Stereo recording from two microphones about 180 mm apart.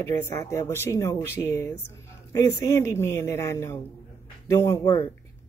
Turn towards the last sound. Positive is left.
turn(degrees=15)  # may be behind; listen again after turning